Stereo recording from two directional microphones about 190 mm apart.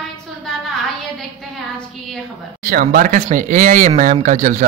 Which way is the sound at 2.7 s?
45° right (ahead or behind).